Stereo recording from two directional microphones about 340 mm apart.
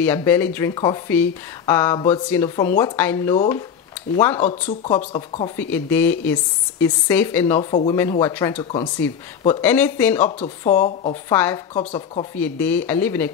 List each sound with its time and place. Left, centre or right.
0.0 s speech: centre
4.4 s speech: centre
5.6 s speech: centre
10.4 s speech: centre
11.3 s speech: centre
11.7 s speech: centre
12.4 s speech: centre